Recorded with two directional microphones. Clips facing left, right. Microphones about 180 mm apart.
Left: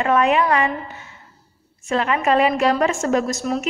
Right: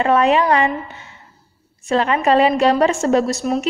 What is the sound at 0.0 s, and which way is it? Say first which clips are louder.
Speech: right 2 dB; 35° right (ahead or behind).